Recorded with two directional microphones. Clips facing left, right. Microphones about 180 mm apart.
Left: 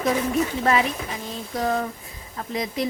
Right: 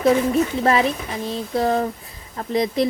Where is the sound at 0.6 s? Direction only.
35° right (ahead or behind).